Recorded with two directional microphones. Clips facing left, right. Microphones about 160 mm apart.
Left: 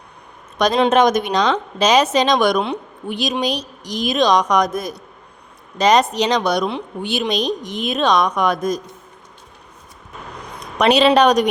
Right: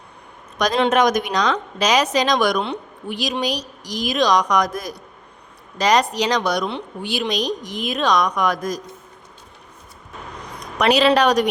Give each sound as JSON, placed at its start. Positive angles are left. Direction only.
{"t": 0.6, "sound": "a woman's voice", "side_deg": 25}
{"t": 10.8, "sound": "a woman's voice", "side_deg": 25}